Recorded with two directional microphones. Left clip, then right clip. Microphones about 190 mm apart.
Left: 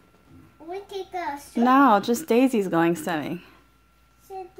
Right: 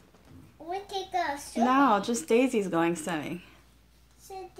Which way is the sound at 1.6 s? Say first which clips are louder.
Left 6 dB; 45° left (ahead or behind).